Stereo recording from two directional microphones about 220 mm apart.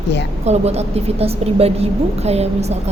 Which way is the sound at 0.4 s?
30° right (ahead or behind).